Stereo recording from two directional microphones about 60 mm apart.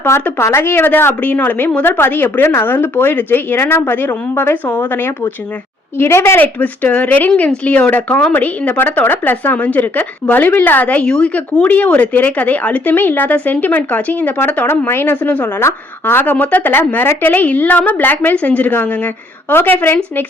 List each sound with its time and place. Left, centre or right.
0.3 s a woman's voice: left
6.0 s a woman's voice: left
6.4 s a woman's voice: left
11.0 s speech: centre
11.7 s speech: left
14.7 s a woman's voice: left